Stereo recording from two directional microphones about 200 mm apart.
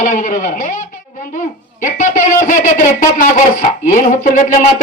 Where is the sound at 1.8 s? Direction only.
40° left (ahead or behind).